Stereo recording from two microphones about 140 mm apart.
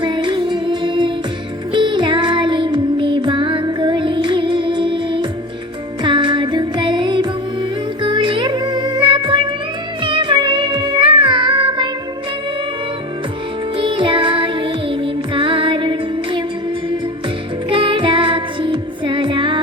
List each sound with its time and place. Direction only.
0.0 s music: 35° right (ahead or behind)
13.7 s music: 35° right (ahead or behind)
17.7 s music: 35° right (ahead or behind)